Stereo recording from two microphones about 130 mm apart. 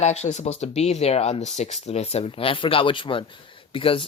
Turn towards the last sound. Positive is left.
turn(degrees=40)  # may be behind; listen again after turning